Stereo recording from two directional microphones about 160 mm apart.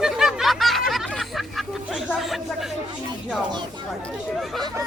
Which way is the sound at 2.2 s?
Centre (ahead or behind).